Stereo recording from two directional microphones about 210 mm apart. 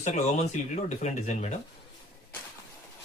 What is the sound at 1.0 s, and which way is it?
Speech, 35° left (ahead or behind).